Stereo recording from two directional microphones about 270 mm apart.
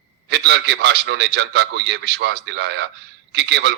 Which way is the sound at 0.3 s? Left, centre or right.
Right.